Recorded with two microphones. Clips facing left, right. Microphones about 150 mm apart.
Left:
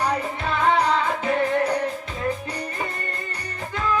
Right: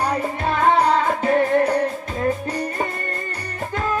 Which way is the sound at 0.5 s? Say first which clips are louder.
Right 3 dB; 45° right (ahead or behind).